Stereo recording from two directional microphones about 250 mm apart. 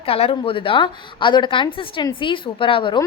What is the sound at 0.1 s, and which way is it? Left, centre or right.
A woman's voice, left.